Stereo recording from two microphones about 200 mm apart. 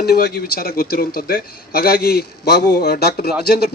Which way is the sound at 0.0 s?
50° left (ahead or behind).